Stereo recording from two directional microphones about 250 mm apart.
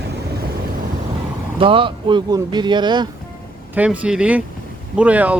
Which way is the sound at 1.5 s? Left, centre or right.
Right.